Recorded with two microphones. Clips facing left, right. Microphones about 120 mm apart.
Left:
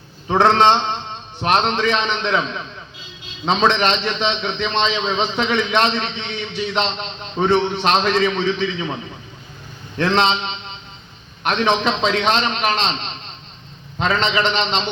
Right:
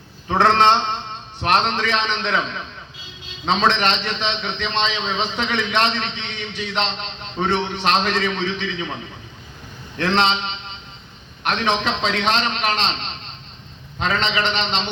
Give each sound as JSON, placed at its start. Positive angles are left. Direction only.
{"t": 0.3, "sound": "a man's voice", "side_deg": 20}
{"t": 3.4, "sound": "a man's voice", "side_deg": 20}
{"t": 10.0, "sound": "a man's voice", "side_deg": 25}
{"t": 14.0, "sound": "a man's voice", "side_deg": 25}